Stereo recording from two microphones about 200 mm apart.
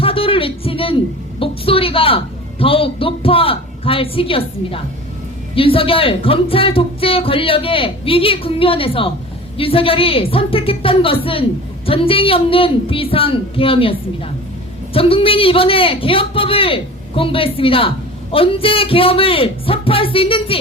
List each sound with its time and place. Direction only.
0.0 s a sound: 25° left (ahead or behind)
1.4 s a woman's voice: 25° left (ahead or behind)
14.9 s a man's voice: 25° left (ahead or behind)